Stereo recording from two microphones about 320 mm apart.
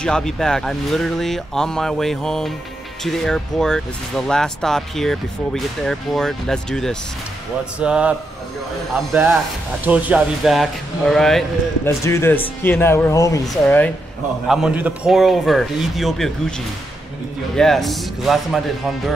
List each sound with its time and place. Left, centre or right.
0.0 s speech: centre
17.6 s speech: centre